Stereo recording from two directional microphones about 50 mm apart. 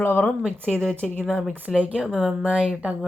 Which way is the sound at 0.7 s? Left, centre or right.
Centre.